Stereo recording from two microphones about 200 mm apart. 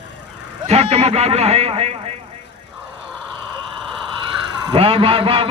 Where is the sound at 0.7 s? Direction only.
30° right (ahead or behind).